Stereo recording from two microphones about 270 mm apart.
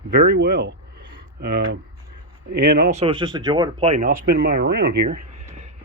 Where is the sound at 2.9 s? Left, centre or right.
Centre.